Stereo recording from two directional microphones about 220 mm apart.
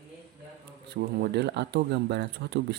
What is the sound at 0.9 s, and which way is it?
Speech, 50° right (ahead or behind).